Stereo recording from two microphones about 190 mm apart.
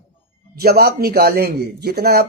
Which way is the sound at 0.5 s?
55° right (ahead or behind).